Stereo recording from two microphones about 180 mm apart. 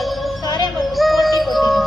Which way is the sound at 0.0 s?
Centre (ahead or behind).